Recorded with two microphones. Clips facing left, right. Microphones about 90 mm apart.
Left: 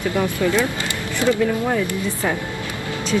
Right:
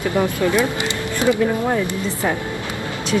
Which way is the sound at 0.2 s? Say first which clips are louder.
Right 2 dB; 15° right (ahead or behind).